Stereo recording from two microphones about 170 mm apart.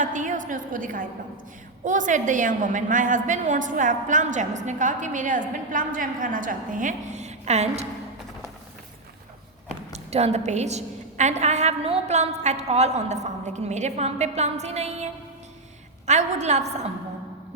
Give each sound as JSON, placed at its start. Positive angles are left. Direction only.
{"t": 0.0, "sound": "a woman's voice", "side_deg": -50}
{"t": 9.9, "sound": "a woman's voice", "side_deg": -40}